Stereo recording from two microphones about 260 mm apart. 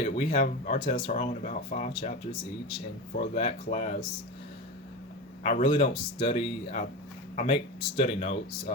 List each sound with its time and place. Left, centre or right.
0.0 s speech: left
3.3 s speech: left
5.4 s speech: left